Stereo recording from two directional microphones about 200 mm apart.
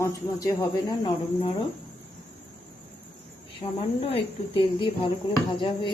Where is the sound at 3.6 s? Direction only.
30° left (ahead or behind).